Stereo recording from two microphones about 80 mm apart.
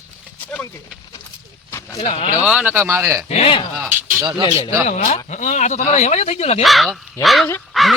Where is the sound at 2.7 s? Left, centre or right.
Right.